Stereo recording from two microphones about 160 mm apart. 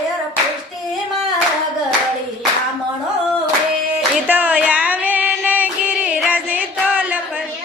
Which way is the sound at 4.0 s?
10° right (ahead or behind).